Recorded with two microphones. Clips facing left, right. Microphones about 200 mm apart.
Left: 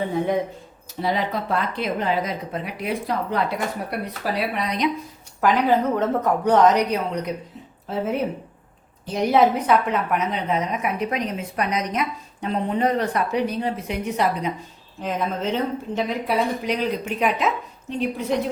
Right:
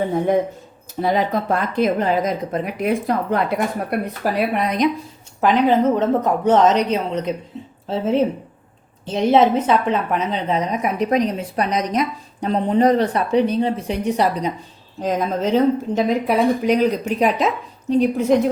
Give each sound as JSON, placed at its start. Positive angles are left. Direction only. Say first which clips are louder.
{"t": 1.0, "sound": "speech", "louder": "right 5 dB", "side_deg": -45}
{"t": 5.4, "sound": "a woman's voice", "louder": "right 3 dB", "side_deg": -20}
{"t": 15.5, "sound": "a woman's voice", "louder": "right 8 dB", "side_deg": -45}